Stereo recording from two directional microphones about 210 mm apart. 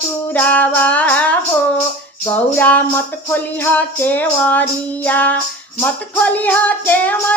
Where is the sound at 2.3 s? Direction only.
10° left (ahead or behind).